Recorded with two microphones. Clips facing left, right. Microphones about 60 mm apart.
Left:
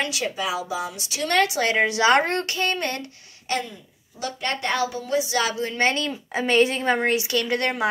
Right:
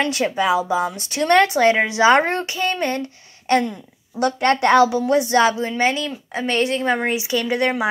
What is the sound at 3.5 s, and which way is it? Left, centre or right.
A woman's voice, right.